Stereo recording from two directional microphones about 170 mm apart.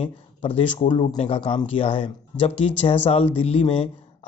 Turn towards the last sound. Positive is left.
turn(degrees=35)  # may be behind; listen again after turning